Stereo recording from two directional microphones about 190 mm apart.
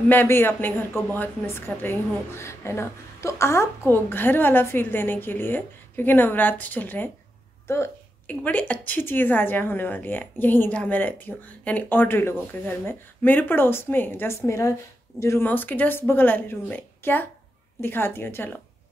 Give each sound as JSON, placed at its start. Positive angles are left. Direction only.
{"t": 0.1, "sound": "a woman's voice", "side_deg": 10}